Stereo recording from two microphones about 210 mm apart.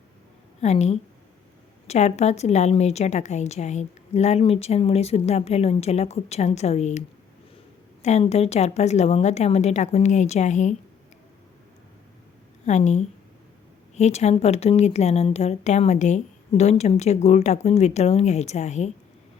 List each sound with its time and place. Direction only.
0.6 s a woman's voice: 30° left (ahead or behind)
8.0 s a woman's voice: 30° left (ahead or behind)
12.6 s a woman's voice: 35° left (ahead or behind)